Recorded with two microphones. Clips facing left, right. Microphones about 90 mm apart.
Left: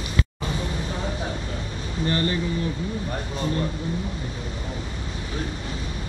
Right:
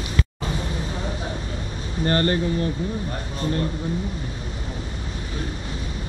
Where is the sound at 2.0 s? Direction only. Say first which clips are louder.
Right 4 dB; 50° right (ahead or behind).